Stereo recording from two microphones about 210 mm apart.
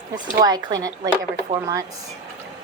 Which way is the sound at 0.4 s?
15° right (ahead or behind).